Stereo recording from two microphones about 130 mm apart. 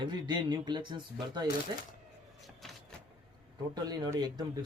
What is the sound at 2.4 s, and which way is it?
Vehicle, centre (ahead or behind).